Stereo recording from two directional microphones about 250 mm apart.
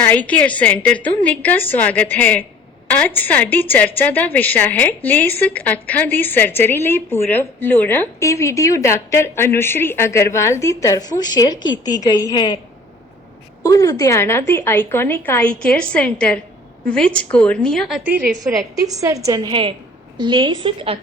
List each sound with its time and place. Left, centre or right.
0.1 s a woman's voice: centre
13.6 s a woman's voice: centre; by 21.0 s right